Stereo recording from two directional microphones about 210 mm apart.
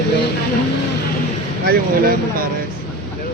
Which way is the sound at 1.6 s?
45° right (ahead or behind).